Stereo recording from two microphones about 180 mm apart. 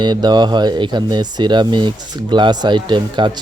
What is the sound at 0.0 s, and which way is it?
Speech, 25° right (ahead or behind).